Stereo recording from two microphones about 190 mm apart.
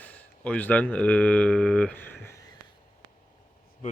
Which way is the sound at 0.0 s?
10° left (ahead or behind).